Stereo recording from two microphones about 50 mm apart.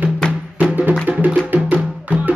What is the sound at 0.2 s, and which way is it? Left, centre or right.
Music, centre.